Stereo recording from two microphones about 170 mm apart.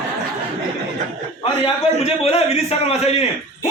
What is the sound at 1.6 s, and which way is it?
A man's voice, 35° left (ahead or behind).